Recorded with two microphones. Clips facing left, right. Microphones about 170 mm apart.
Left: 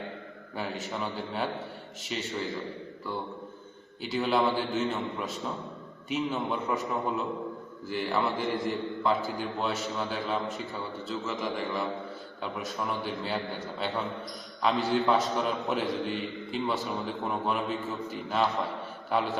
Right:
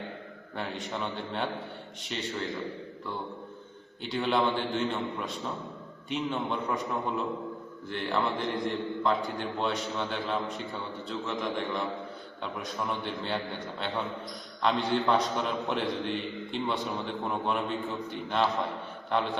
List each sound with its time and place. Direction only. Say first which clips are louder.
0.5 s a man's voice: left 1 dB; 5° left (ahead or behind)
4.0 s a man's voice: left 1 dB; 5° left (ahead or behind)